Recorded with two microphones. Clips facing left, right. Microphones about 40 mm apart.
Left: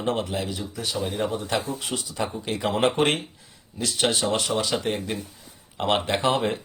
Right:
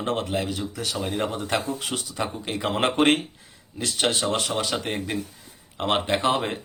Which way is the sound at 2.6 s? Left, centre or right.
Right.